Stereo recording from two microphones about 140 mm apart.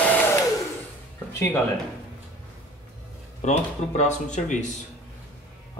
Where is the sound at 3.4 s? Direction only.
55° left (ahead or behind).